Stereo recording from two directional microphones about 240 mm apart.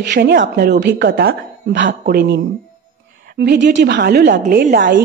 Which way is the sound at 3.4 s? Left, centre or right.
Right.